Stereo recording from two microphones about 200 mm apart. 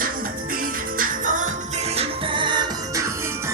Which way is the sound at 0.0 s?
45° right (ahead or behind).